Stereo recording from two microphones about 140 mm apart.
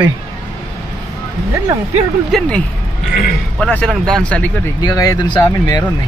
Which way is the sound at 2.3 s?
Centre (ahead or behind).